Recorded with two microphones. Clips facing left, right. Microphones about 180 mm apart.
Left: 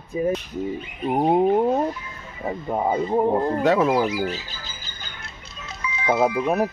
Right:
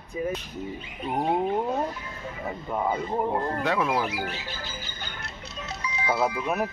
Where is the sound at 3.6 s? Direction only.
40° left (ahead or behind).